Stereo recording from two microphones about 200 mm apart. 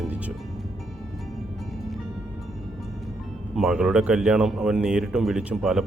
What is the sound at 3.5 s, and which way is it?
Speech, 5° right (ahead or behind).